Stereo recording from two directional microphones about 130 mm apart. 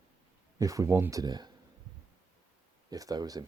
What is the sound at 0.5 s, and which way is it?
Speech, 25° right (ahead or behind).